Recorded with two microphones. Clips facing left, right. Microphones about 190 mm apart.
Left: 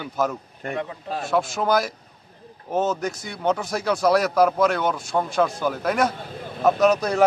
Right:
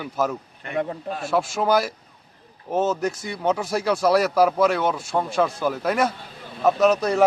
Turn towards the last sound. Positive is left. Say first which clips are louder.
# even
turn(degrees=0)  # may be behind; listen again after turning